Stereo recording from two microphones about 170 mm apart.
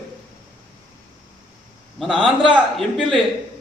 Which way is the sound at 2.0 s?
Centre (ahead or behind).